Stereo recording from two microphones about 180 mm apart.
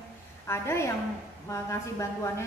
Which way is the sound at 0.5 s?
15° left (ahead or behind).